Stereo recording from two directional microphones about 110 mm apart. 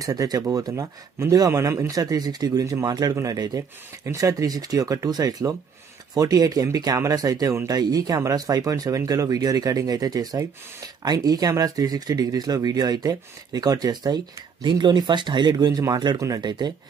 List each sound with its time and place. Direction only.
0.0 s speech: 35° right (ahead or behind)